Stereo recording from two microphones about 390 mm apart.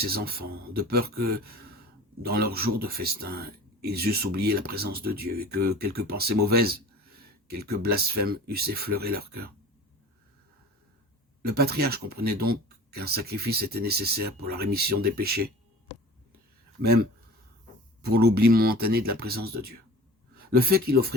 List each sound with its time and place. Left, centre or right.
0.0 s speech: right
11.4 s speech: right
16.8 s speech: right
18.1 s speech: right